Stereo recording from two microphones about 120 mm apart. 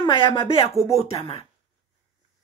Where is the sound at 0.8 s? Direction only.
60° left (ahead or behind).